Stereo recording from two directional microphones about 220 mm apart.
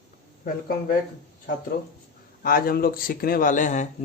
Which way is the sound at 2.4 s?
40° left (ahead or behind).